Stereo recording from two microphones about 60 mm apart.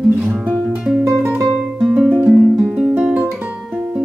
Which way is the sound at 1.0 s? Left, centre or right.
Right.